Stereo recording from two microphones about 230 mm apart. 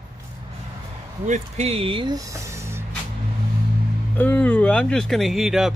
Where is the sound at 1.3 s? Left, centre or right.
Right; by 2.9 s centre.